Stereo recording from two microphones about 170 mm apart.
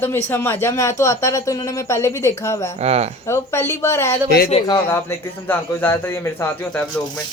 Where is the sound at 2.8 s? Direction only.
40° right (ahead or behind).